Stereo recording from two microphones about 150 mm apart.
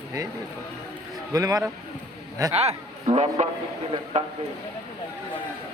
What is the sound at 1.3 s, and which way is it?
Speech, 25° right (ahead or behind).